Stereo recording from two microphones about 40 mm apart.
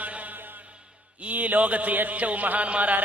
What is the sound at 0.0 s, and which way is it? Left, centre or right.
Music, right.